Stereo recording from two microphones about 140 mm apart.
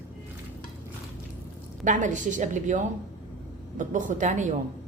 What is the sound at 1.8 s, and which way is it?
A woman's voice, 65° right (ahead or behind).